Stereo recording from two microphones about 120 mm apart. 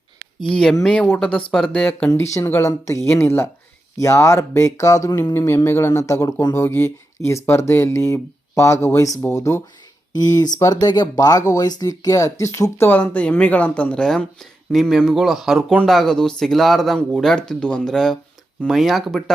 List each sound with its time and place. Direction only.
0.4 s speech: 5° left (ahead or behind); by 9.6 s 25° left (ahead or behind)
10.1 s speech: 35° left (ahead or behind); by 19.2 s centre (ahead or behind)